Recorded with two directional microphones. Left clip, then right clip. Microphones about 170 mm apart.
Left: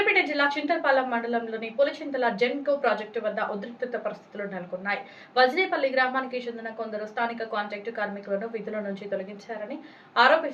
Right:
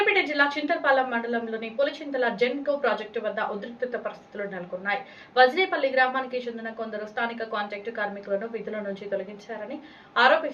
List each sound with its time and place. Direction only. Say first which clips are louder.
0.0 s a woman's voice: right 1 dB; 5° right (ahead or behind)